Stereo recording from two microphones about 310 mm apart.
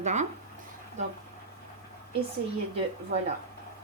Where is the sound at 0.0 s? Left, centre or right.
Right.